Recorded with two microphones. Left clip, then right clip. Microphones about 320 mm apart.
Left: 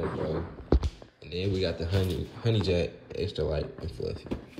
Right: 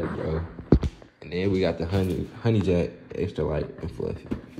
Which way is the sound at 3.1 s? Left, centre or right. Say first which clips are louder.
Right 3 dB; right.